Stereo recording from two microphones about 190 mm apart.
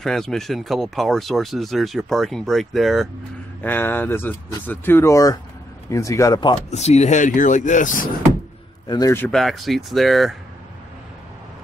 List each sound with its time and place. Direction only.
0.0 s speech: centre (ahead or behind)
3.6 s speech: 10° left (ahead or behind)
6.7 s speech: 35° left (ahead or behind)
8.8 s a man's voice: 20° left (ahead or behind)
9.3 s speech: centre (ahead or behind)